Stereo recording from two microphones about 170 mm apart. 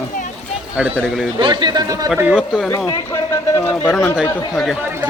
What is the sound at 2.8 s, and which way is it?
Speech, 25° left (ahead or behind).